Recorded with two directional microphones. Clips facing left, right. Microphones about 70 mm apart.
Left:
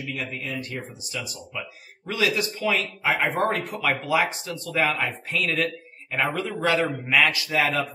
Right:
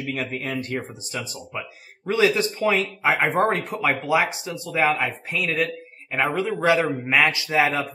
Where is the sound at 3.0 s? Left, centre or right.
Centre.